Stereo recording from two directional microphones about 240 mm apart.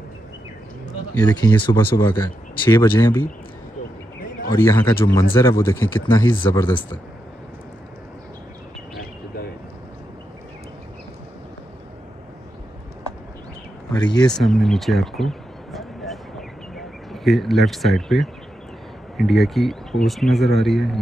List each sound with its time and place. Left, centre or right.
1.1 s speech: centre
4.5 s speech: centre
13.9 s speech: centre
14.3 s a sound: centre
19.1 s speech: centre